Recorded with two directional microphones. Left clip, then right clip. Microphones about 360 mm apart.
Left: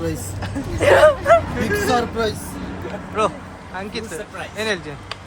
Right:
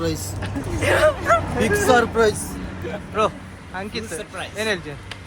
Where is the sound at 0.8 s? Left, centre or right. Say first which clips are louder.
Left 5 dB; left.